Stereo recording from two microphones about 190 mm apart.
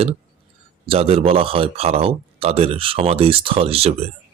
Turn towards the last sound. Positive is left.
turn(degrees=-30)  # may be behind; listen again after turning